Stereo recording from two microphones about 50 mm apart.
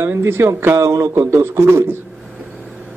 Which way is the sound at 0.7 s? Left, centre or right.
Right.